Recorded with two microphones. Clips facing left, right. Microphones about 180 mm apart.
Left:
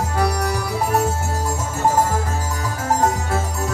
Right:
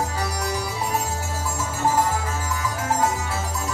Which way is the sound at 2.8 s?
45° left (ahead or behind).